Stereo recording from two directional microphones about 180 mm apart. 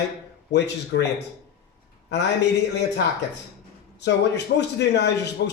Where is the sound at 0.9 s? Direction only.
90° left.